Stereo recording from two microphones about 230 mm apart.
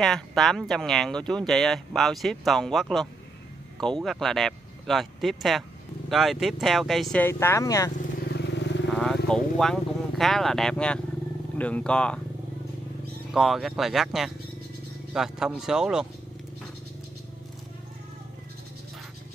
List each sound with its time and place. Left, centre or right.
0.0 s speech: centre
8.0 s vehicle: left
8.9 s vehicle: centre
11.5 s speech: centre
13.3 s speech: centre